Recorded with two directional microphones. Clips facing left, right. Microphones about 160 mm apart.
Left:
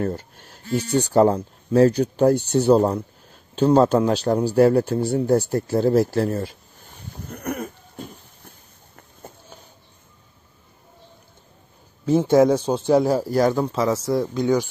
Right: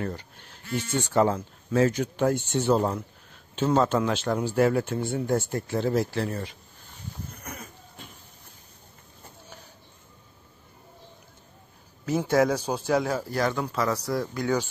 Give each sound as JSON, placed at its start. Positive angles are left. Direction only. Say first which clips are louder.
{"t": 0.0, "sound": "speech", "louder": "left 7 dB", "side_deg": 45}
{"t": 7.2, "sound": "goat", "louder": "left 12 dB", "side_deg": 60}
{"t": 12.1, "sound": "speech", "louder": "left 7 dB", "side_deg": 25}
{"t": 13.7, "sound": "speech", "louder": "left 5 dB", "side_deg": 30}
{"t": 13.9, "sound": "speech", "louder": "left 6 dB", "side_deg": 0}
{"t": 14.2, "sound": "speech", "louder": "left 6 dB", "side_deg": 20}